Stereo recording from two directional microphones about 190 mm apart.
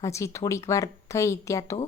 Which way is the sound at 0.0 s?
15° left (ahead or behind).